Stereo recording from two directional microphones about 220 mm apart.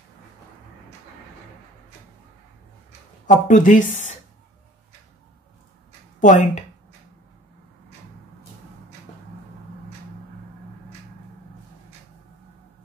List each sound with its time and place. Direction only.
3.3 s speech: 35° left (ahead or behind)
6.1 s speech: 35° left (ahead or behind)